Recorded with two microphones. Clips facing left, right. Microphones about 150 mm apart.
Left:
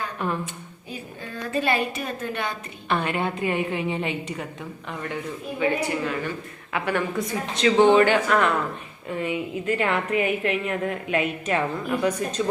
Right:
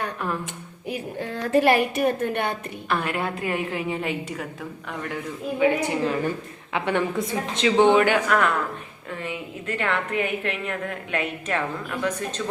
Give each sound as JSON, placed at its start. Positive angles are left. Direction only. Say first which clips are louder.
{"t": 0.2, "sound": "a woman's voice", "louder": "left 3 dB", "side_deg": 0}
{"t": 0.9, "sound": "a woman's voice", "louder": "right 7 dB", "side_deg": -70}
{"t": 2.9, "sound": "a woman's voice", "louder": "left 1 dB", "side_deg": 0}
{"t": 5.5, "sound": "speech", "louder": "right 3 dB", "side_deg": -15}
{"t": 7.9, "sound": "speech", "louder": "left 1 dB", "side_deg": -10}
{"t": 9.2, "sound": "a woman's voice", "louder": "left 6 dB", "side_deg": 5}